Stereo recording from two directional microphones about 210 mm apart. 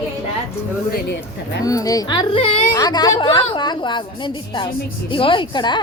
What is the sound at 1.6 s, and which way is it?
Speech, 15° left (ahead or behind).